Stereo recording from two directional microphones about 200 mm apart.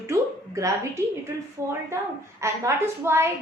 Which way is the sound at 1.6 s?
15° right (ahead or behind).